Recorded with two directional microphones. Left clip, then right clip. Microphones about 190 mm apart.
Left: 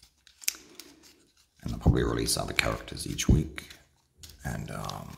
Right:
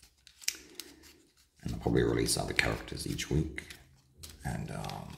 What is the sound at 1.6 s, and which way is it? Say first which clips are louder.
Speech: even; 25° left (ahead or behind).